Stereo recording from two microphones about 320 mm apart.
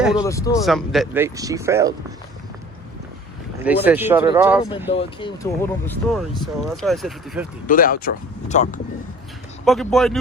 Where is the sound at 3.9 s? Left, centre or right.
Centre.